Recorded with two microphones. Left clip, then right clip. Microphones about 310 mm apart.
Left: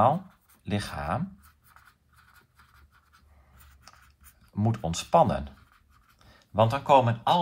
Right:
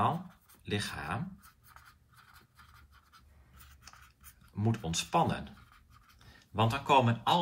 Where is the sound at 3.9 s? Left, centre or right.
Centre.